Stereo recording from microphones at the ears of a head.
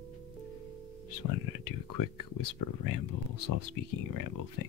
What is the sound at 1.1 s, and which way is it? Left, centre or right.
Speech, left.